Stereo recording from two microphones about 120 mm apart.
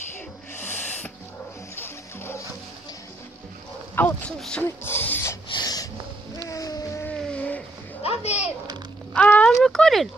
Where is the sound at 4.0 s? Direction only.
15° left (ahead or behind).